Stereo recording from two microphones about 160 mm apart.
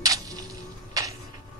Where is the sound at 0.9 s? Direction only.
20° right (ahead or behind).